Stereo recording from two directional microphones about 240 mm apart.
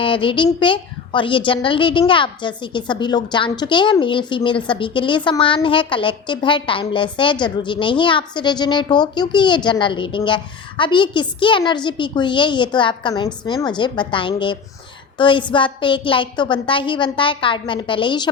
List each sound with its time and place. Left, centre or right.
0.0 s a woman's voice: left